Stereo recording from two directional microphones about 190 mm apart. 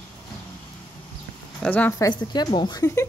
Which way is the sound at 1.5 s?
5° left (ahead or behind).